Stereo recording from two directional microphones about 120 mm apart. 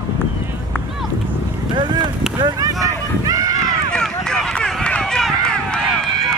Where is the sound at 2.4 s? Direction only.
30° right (ahead or behind).